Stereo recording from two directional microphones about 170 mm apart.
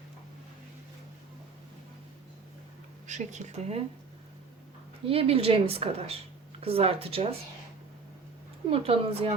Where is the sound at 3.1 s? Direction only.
45° right (ahead or behind).